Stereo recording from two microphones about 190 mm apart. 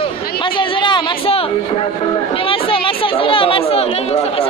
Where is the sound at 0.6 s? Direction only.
25° left (ahead or behind).